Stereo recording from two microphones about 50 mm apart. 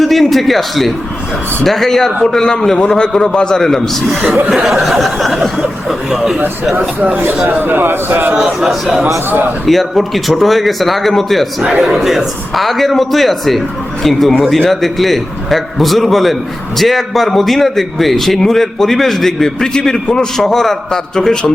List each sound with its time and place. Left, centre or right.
0.0 s a man's voice: centre
4.4 s a man's voice: centre
6.7 s a man's voice: right
8.3 s a man's voice: centre